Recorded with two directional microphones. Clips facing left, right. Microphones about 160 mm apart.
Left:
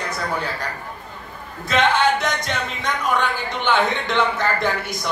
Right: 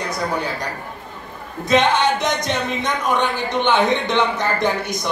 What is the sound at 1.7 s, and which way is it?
Speech, 20° right (ahead or behind).